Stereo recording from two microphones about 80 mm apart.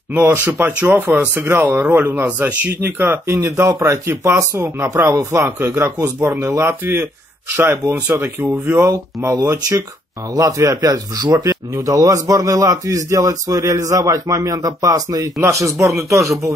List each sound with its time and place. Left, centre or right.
0.1 s speech: right
9.4 s a man's voice: right